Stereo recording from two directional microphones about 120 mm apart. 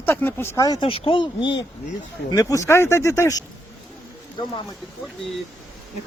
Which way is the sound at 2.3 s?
30° left (ahead or behind).